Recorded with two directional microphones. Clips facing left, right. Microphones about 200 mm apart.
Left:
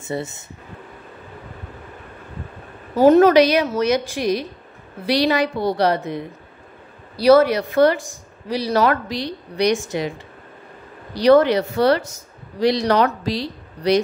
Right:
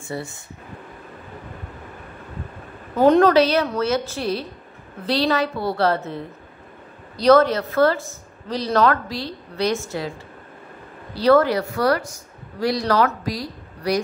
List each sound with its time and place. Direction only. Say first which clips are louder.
0.0 s speech: left 4 dB; 20° left (ahead or behind)
3.0 s speech: left 3 dB; 5° left (ahead or behind)
11.1 s speech: left 3 dB; 20° left (ahead or behind)